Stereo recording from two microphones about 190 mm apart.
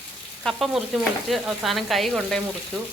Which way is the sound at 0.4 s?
Centre (ahead or behind).